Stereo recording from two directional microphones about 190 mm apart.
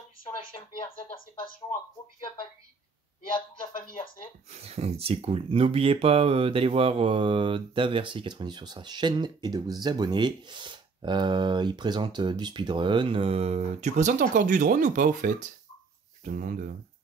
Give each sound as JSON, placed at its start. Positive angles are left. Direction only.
{"t": 4.6, "sound": "speech", "side_deg": -35}